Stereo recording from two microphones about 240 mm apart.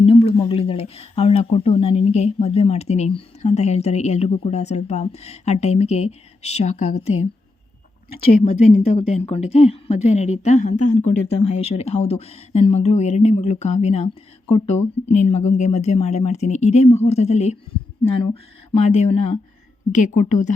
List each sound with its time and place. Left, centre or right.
0.0 s speech: left
8.2 s speech: left
18.7 s a woman's voice: left